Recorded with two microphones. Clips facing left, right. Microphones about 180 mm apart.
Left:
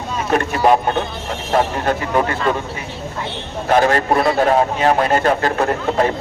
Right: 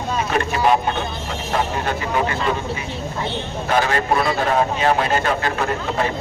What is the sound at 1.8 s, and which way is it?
Speech, 45° left (ahead or behind).